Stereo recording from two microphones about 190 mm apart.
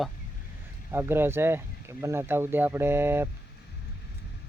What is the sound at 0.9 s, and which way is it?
Speech, 15° right (ahead or behind).